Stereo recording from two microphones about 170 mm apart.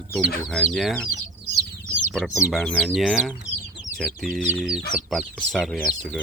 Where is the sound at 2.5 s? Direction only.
Centre (ahead or behind).